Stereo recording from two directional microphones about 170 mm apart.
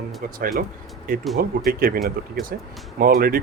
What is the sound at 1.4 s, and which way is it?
Speech, 60° right (ahead or behind).